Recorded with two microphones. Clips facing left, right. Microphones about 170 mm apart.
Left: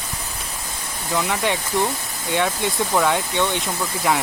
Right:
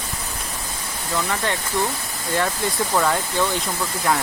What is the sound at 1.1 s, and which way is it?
Speech, 10° left (ahead or behind).